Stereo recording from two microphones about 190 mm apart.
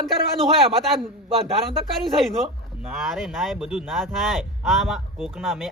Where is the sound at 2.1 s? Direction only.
Centre (ahead or behind).